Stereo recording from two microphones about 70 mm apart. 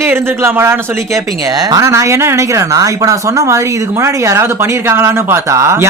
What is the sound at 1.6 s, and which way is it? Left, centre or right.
Speech, right.